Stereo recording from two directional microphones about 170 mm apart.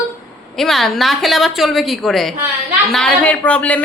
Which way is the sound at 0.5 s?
Centre (ahead or behind).